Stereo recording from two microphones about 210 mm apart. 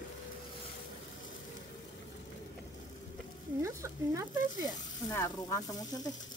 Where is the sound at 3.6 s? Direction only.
15° right (ahead or behind).